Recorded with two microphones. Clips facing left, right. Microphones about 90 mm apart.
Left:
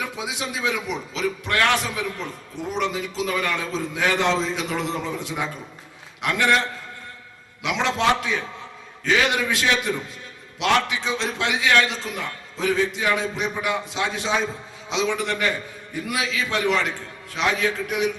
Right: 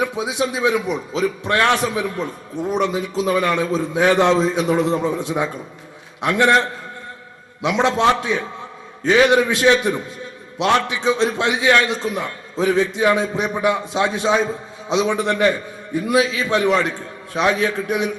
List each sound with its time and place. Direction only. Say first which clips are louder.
0.0 s a man's voice: right 8 dB; 25° right (ahead or behind)